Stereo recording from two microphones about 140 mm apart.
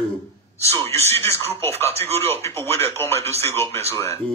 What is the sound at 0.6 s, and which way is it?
A man's voice, 20° left (ahead or behind).